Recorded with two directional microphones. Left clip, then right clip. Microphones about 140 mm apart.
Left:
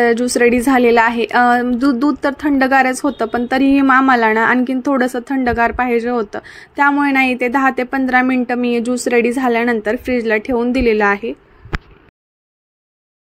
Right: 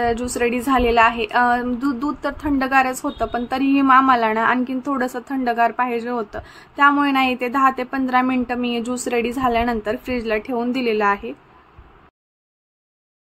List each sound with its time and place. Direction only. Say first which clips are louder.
0.0 s a woman's voice: left 8 dB; 35° left (ahead or behind)